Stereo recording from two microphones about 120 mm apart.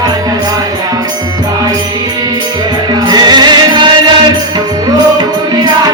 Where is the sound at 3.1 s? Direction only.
35° right (ahead or behind).